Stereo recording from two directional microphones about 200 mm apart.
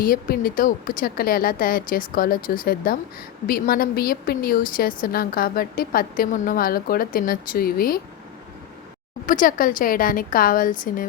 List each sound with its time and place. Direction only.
0.0 s a woman's voice: 45° left (ahead or behind)
9.2 s a woman's voice: 45° left (ahead or behind)